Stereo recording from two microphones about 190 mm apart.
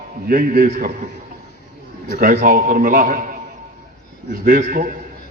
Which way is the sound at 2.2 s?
45° right (ahead or behind).